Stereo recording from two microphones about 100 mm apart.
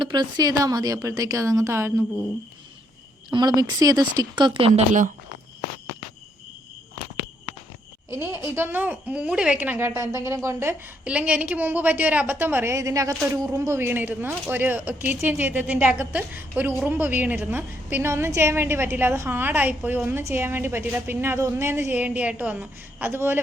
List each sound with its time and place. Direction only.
0.0 s speech: 45° right (ahead or behind); by 2.0 s 25° right (ahead or behind)
3.3 s speech: 40° right (ahead or behind); by 4.9 s 80° right
8.1 s a woman's voice: 25° right (ahead or behind)
11.0 s a woman's voice: 15° right (ahead or behind); by 13.7 s 35° right (ahead or behind)
13.7 s a woman's voice: 20° right (ahead or behind)